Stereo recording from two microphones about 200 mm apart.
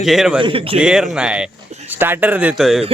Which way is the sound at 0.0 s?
Centre (ahead or behind).